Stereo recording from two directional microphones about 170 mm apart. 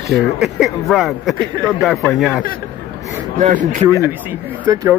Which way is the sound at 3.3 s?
50° right (ahead or behind).